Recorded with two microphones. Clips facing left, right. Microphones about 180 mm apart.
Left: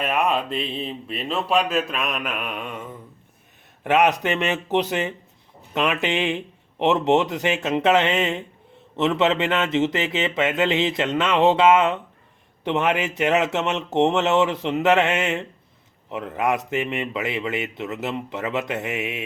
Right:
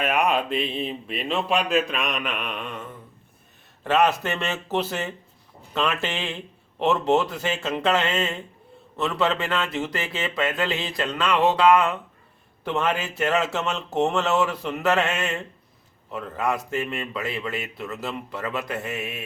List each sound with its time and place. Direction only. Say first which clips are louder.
0.0 s a man's voice: even; centre (ahead or behind); by 19.2 s 20° left (ahead or behind)